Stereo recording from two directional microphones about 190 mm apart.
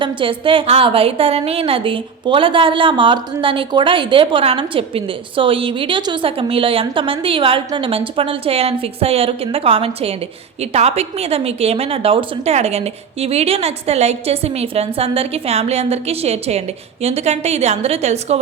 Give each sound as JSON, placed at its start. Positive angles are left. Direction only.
{"t": 0.0, "sound": "a woman's voice", "side_deg": -25}